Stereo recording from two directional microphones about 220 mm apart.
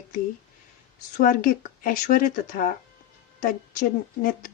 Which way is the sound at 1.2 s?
40° left (ahead or behind).